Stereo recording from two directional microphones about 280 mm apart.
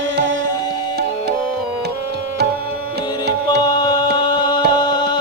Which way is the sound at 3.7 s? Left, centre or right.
Centre.